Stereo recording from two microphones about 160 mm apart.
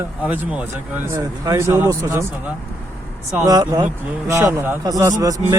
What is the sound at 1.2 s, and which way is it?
Speech, 20° right (ahead or behind).